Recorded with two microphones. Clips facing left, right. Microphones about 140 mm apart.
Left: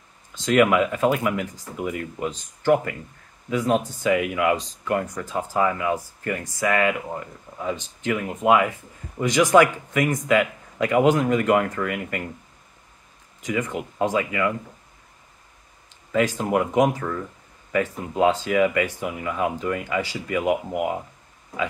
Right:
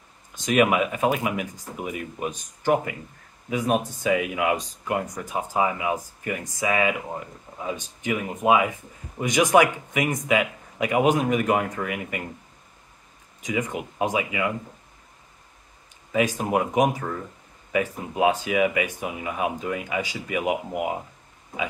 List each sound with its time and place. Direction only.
0.3 s speech: 15° right (ahead or behind)
13.4 s speech: 15° right (ahead or behind)
16.1 s speech: 15° right (ahead or behind)
18.2 s speech: 15° right (ahead or behind)